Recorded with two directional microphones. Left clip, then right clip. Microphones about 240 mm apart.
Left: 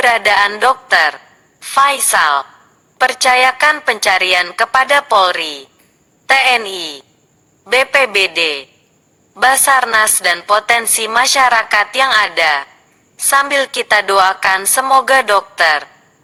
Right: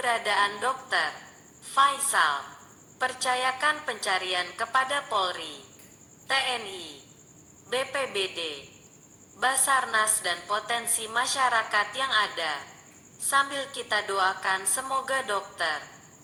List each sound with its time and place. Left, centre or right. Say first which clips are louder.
0.0 s a woman's voice: left 14 dB; left